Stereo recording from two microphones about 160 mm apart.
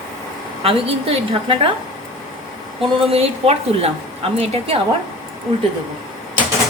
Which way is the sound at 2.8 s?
35° right (ahead or behind).